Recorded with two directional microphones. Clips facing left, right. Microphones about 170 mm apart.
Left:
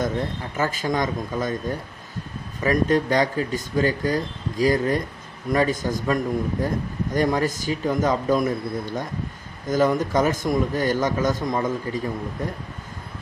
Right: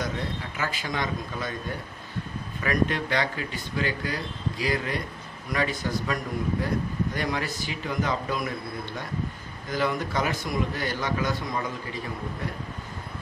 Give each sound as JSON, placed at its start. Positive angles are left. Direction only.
{"t": 0.0, "sound": "a man's voice", "side_deg": 45}
{"t": 2.6, "sound": "a man's voice", "side_deg": 40}